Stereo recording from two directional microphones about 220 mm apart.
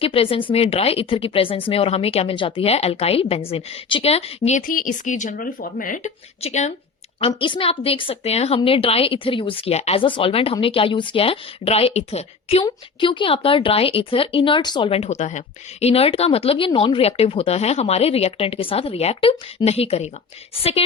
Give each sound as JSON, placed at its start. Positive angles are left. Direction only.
{"t": 0.0, "sound": "a woman's voice", "side_deg": 25}